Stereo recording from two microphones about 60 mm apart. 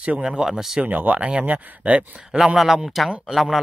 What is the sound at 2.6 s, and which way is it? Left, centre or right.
Speech, centre.